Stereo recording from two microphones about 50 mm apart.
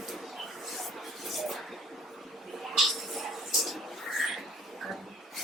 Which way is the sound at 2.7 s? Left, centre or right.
Centre.